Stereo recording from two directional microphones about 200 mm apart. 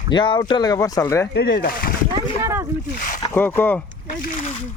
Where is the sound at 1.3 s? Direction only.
55° left (ahead or behind).